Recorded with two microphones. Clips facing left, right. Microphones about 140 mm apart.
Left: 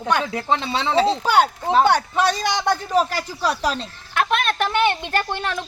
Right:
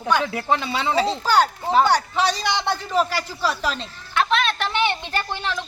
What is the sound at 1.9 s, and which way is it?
A man's voice, 55° left (ahead or behind).